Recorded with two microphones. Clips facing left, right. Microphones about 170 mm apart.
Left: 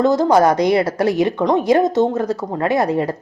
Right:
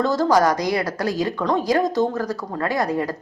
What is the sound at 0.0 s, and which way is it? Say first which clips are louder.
A woman's voice: left 4 dB; 20° left (ahead or behind).